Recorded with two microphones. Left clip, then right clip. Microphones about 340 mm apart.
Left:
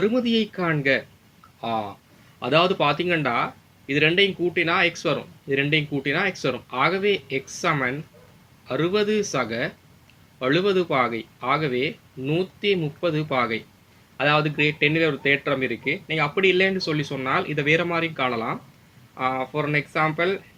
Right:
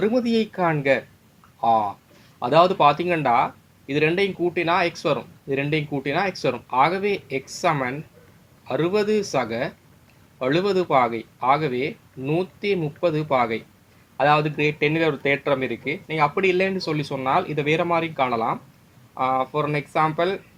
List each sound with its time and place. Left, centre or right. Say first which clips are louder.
0.0 s speech: right 1 dB; centre
2.4 s speech: right 4 dB; centre